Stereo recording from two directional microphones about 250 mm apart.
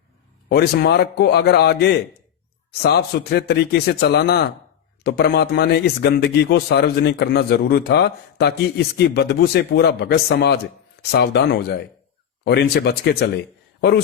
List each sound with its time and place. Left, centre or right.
0.4 s speech: left